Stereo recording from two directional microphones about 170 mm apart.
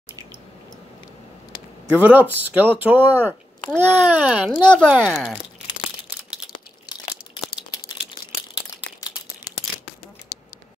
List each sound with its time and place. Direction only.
2.0 s a child's voice: 10° right (ahead or behind)
4.6 s speech: 5° left (ahead or behind)
9.0 s scissors: 20° left (ahead or behind)